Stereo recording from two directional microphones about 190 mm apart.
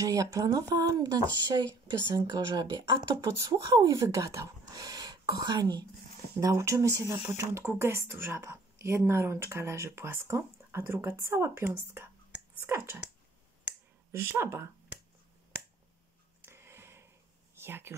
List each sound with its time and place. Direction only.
0.0 s speech: 20° right (ahead or behind)
13.7 s finger snapping: 10° right (ahead or behind)
16.3 s a sound: 15° right (ahead or behind)
17.6 s speech: 10° right (ahead or behind)